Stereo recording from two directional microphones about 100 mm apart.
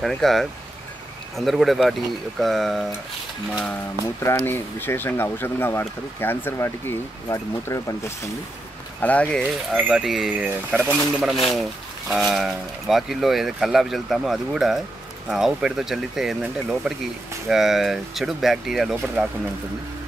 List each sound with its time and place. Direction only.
0.0 s speech: centre (ahead or behind)
4.0 s speech: 30° left (ahead or behind)
9.0 s speech: 15° left (ahead or behind)
9.7 s speech: 10° right (ahead or behind)
10.4 s speech: 15° right (ahead or behind)
11.3 s speech: centre (ahead or behind)
16.8 s speech: 15° right (ahead or behind)
17.5 s speech: centre (ahead or behind)